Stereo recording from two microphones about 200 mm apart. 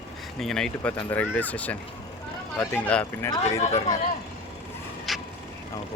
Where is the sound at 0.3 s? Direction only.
Centre (ahead or behind).